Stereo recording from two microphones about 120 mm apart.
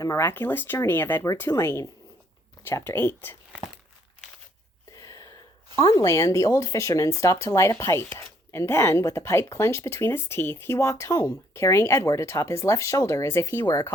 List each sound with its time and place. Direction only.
0.0 s speech: 25° left (ahead or behind)
4.9 s a sound: 25° left (ahead or behind)
5.7 s speech: 30° left (ahead or behind)